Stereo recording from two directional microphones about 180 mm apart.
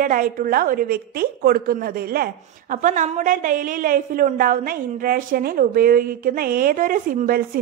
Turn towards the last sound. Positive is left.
turn(degrees=-50)  # may be behind; listen again after turning